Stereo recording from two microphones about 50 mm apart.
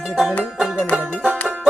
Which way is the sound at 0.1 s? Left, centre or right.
Centre.